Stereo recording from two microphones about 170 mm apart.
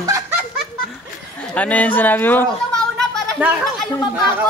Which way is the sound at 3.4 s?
10° right (ahead or behind).